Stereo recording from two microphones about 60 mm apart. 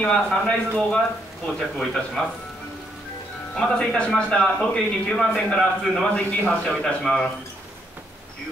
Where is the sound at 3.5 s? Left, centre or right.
Centre.